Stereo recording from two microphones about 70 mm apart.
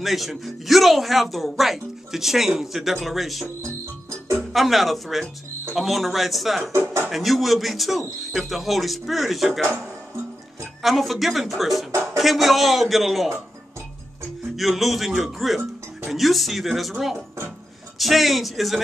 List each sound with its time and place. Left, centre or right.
0.0 s speech: centre
6.7 s speech: right
7.1 s speech: centre
10.8 s speech: centre
14.6 s speech: centre
17.9 s speech: centre